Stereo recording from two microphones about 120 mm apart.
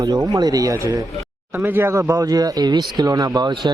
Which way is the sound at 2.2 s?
30° right (ahead or behind).